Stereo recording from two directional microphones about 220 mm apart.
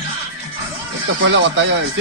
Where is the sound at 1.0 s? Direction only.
55° right (ahead or behind).